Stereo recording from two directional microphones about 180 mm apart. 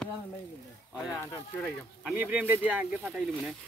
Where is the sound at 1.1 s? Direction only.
15° left (ahead or behind).